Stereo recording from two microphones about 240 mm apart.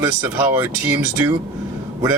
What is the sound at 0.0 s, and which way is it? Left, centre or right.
Speech, centre.